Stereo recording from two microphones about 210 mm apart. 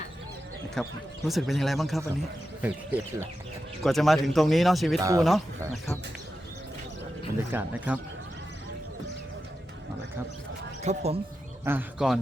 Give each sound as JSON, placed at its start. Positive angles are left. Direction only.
{"t": 0.8, "sound": "speech", "side_deg": 0}
{"t": 7.3, "sound": "speech", "side_deg": -10}
{"t": 10.8, "sound": "speech", "side_deg": -30}
{"t": 11.6, "sound": "speech", "side_deg": -10}